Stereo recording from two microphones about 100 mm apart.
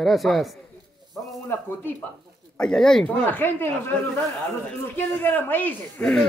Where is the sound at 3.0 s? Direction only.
20° left (ahead or behind).